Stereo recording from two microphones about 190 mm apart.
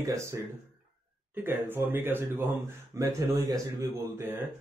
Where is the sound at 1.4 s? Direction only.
10° right (ahead or behind).